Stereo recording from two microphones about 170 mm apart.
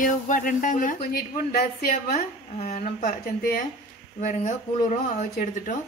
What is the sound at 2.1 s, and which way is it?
Speech, 40° left (ahead or behind).